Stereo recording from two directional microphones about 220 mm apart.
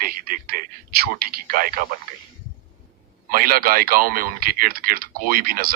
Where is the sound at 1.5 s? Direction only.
40° right (ahead or behind).